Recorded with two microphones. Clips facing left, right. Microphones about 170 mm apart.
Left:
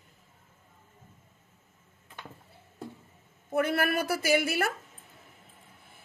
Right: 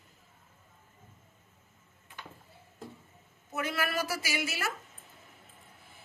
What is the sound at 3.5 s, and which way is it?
A woman's voice, 55° left (ahead or behind).